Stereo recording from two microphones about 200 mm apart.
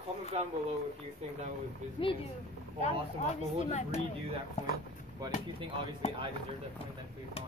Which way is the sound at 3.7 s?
35° left (ahead or behind).